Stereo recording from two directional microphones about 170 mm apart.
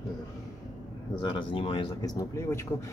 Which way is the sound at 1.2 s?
30° left (ahead or behind).